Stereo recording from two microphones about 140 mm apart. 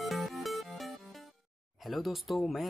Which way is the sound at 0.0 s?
Centre (ahead or behind).